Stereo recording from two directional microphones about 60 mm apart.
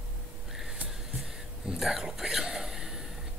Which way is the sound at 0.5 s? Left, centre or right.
Centre.